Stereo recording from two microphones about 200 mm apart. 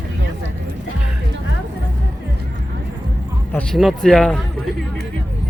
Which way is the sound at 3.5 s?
Centre (ahead or behind).